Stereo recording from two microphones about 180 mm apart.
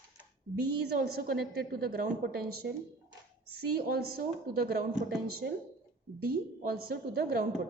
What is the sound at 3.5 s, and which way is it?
A woman's voice, 60° right (ahead or behind).